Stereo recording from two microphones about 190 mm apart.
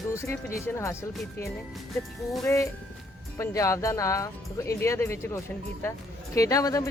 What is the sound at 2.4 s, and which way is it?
Speech, 15° left (ahead or behind).